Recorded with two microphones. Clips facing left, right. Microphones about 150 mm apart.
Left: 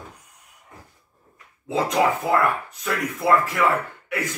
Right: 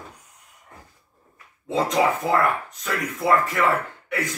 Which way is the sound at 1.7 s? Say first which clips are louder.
Even; centre (ahead or behind).